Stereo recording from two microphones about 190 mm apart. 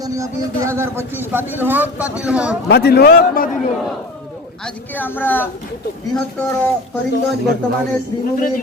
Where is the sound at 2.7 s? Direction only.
55° left (ahead or behind).